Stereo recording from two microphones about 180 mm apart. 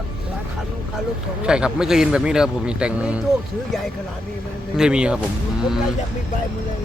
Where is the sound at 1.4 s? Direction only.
5° right (ahead or behind).